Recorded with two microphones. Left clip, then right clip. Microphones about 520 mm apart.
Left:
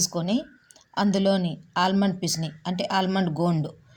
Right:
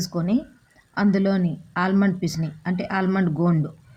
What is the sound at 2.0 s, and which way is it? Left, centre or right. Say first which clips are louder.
Speech: right 1 dB; right.